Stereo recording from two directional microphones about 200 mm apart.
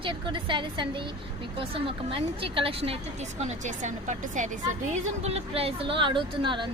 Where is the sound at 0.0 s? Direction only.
25° right (ahead or behind).